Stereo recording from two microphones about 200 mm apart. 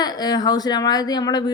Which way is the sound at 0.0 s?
20° left (ahead or behind).